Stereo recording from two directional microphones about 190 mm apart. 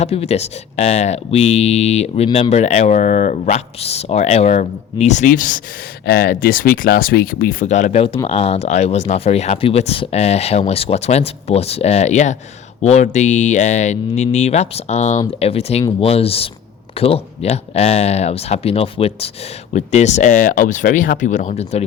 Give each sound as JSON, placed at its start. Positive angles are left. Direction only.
{"t": 0.0, "sound": "speech", "side_deg": 35}
{"t": 7.6, "sound": "speech", "side_deg": 40}